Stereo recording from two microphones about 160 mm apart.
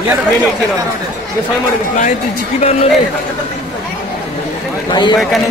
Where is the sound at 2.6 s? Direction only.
40° left (ahead or behind).